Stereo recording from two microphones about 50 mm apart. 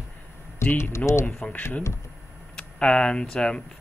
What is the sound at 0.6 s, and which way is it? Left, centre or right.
Speech, left.